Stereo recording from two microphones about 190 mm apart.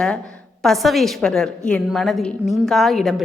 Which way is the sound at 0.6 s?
Centre (ahead or behind).